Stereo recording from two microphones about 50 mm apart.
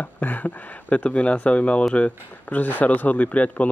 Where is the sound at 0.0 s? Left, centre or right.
Left.